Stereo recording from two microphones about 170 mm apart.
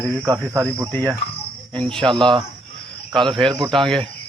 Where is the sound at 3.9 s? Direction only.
5° left (ahead or behind).